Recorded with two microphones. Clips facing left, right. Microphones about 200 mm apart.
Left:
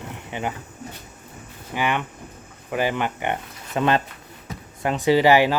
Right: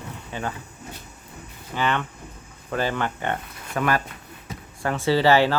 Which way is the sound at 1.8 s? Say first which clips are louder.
Left 1 dB; 15° left (ahead or behind).